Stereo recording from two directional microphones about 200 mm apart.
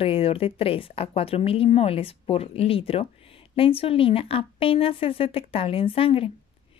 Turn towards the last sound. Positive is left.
turn(degrees=25)  # may be behind; listen again after turning